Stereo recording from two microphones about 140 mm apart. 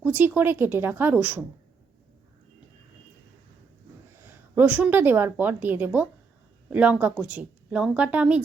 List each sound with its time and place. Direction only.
0.0 s a woman's voice: 10° right (ahead or behind)
4.3 s a woman's voice: 10° right (ahead or behind)